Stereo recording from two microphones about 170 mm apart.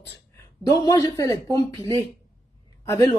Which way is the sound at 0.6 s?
20° left (ahead or behind).